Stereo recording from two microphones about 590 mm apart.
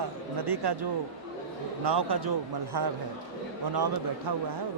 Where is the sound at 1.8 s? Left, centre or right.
Right.